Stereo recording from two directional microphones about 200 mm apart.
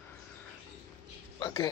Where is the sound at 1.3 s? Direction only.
20° left (ahead or behind).